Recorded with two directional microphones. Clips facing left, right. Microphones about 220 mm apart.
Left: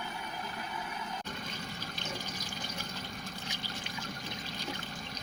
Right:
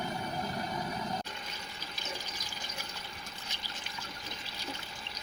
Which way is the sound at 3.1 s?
45° left (ahead or behind).